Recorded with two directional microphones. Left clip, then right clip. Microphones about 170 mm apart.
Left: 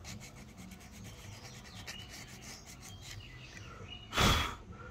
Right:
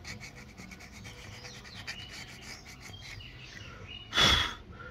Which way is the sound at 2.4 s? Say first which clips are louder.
Right 4 dB; 40° left (ahead or behind).